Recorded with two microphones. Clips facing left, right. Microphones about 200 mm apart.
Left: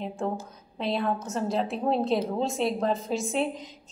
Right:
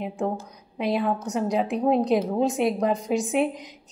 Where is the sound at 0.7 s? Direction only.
15° right (ahead or behind).